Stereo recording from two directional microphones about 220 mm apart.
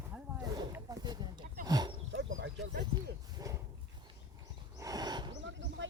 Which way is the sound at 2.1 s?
60° right (ahead or behind).